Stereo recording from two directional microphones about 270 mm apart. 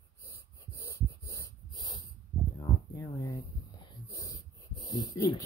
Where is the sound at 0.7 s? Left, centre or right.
Centre.